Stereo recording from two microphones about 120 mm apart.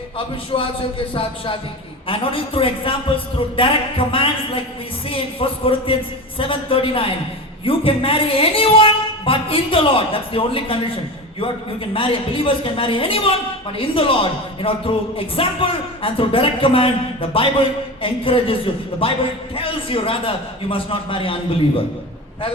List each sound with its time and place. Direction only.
0.5 s speech: 50° left (ahead or behind)
11.9 s speech: 50° left (ahead or behind)